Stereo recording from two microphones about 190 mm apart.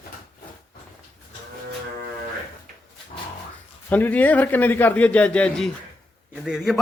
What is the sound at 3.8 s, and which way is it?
A man's voice, 10° left (ahead or behind).